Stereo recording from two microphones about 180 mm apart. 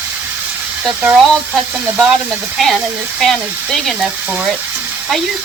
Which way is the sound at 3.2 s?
Centre (ahead or behind).